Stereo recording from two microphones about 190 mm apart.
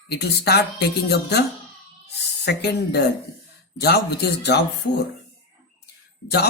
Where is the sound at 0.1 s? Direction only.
60° left (ahead or behind).